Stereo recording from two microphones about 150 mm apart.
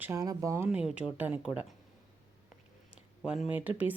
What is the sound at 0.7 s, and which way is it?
Speech, 10° right (ahead or behind).